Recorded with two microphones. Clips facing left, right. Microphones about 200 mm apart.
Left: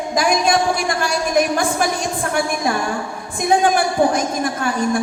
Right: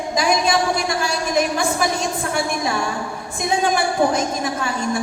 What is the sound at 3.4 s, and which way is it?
A woman's voice, 55° left (ahead or behind).